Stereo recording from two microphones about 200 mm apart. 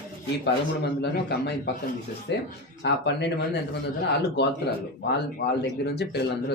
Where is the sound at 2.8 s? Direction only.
60° left (ahead or behind).